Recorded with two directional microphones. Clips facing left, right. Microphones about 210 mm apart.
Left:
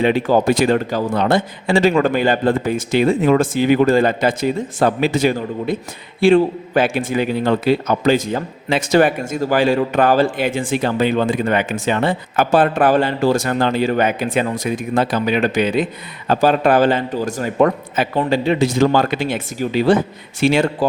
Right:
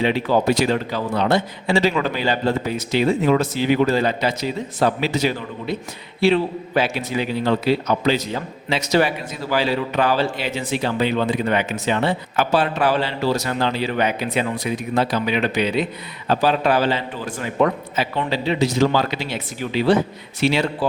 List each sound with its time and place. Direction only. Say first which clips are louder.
0.0 s a man's voice: left 4 dB; 50° left (ahead or behind)